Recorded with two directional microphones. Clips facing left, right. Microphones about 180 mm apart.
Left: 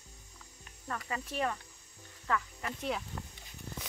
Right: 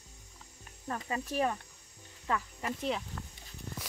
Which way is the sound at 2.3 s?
20° right (ahead or behind).